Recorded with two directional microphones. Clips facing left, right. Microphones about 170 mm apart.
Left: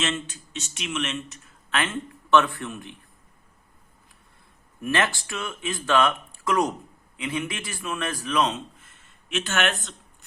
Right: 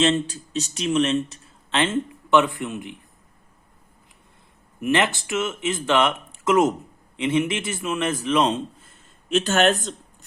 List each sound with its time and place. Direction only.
0.0 s speech: 30° right (ahead or behind)
4.8 s speech: 20° right (ahead or behind); by 9.9 s 35° right (ahead or behind)